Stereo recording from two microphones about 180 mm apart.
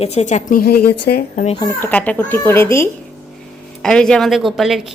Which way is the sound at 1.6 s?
15° left (ahead or behind).